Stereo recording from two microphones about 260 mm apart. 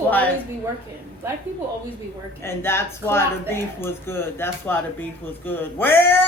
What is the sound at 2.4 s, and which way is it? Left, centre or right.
Speech, centre.